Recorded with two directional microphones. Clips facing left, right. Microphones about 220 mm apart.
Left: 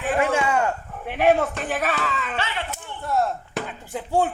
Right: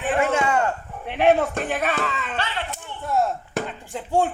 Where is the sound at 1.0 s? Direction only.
5° left (ahead or behind).